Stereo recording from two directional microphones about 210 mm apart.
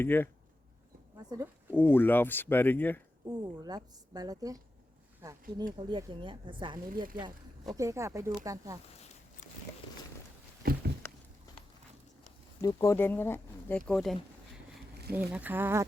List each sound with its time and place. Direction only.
0.0 s speech: 10° left (ahead or behind)
1.3 s speech: 15° right (ahead or behind)
1.7 s speech: 10° left (ahead or behind)
3.2 s a woman's voice: 20° right (ahead or behind)
6.9 s speech: 40° right (ahead or behind)
7.8 s a woman's voice: 15° right (ahead or behind)
10.6 s a sound: 45° right (ahead or behind)
12.6 s a woman's voice: 15° left (ahead or behind); by 15.9 s 10° right (ahead or behind)